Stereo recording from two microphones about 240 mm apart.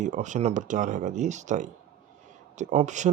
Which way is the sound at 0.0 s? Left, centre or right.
Right.